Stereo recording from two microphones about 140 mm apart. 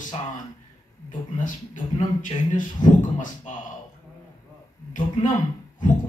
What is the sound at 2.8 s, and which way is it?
Speech, 30° left (ahead or behind).